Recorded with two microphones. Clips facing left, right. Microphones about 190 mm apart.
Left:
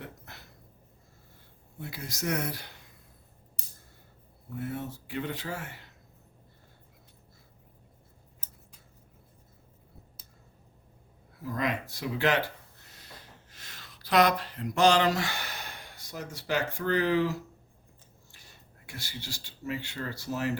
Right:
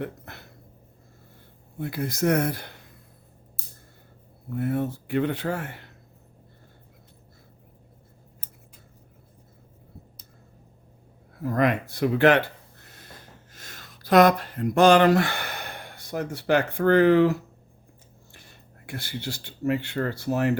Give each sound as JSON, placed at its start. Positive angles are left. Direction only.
{"t": 0.0, "sound": "a sound", "side_deg": -60}
{"t": 1.8, "sound": "speech", "side_deg": -55}
{"t": 3.6, "sound": "a sound", "side_deg": -5}
{"t": 4.4, "sound": "speech", "side_deg": -60}
{"t": 11.4, "sound": "speech", "side_deg": -60}
{"t": 18.9, "sound": "speech", "side_deg": -55}